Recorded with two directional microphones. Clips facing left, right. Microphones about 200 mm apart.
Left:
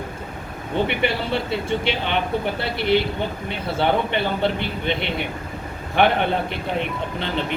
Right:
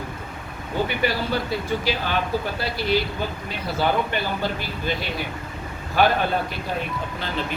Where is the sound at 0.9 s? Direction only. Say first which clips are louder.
Left 1 dB; 25° left (ahead or behind).